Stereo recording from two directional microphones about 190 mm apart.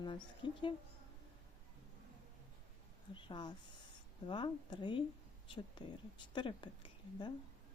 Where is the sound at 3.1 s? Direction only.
25° left (ahead or behind).